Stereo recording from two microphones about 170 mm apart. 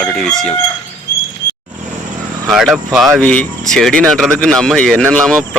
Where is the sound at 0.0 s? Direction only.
Centre (ahead or behind).